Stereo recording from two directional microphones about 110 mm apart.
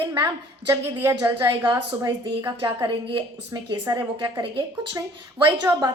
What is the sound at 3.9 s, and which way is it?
Speech, 30° right (ahead or behind).